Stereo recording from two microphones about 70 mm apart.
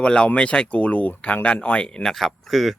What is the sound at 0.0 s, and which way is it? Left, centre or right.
Speech, centre.